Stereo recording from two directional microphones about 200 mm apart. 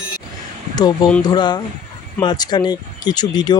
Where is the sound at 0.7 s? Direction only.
20° left (ahead or behind).